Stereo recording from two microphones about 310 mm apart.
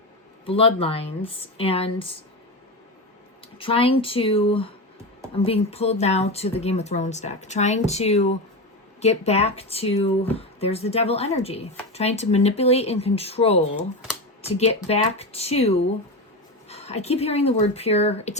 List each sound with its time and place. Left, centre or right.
0.4 s speech: centre
3.6 s speech: centre